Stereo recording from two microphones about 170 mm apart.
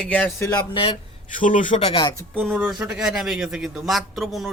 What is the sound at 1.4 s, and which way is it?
Speech, 50° left (ahead or behind).